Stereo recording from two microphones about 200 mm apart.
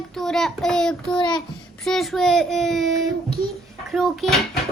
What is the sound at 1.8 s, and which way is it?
A child's voice, centre (ahead or behind).